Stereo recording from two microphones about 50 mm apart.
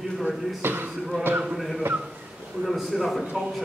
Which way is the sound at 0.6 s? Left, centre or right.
Right.